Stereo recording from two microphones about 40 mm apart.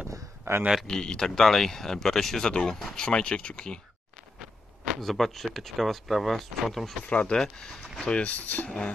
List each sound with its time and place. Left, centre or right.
0.8 s speech: centre
3.1 s speech: left
4.4 s a sound: centre
5.0 s speech: centre
7.1 s speech: left
7.3 s speech: centre
8.0 s speech: left
8.6 s speech: left